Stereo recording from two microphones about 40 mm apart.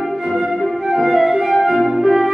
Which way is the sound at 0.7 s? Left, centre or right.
Centre.